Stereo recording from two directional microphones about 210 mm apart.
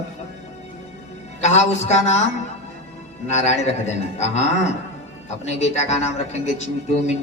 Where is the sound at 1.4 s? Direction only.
30° left (ahead or behind).